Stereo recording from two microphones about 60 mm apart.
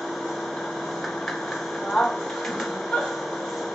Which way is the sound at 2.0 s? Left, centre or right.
Centre.